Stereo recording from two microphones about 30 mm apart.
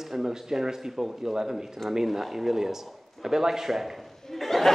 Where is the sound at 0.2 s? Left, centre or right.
Centre.